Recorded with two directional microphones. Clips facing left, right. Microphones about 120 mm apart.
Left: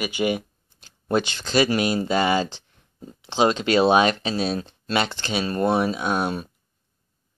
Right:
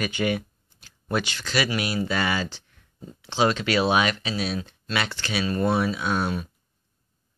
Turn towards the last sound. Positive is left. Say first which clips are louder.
# left 2 dB
turn(degrees=20)  # may be behind; listen again after turning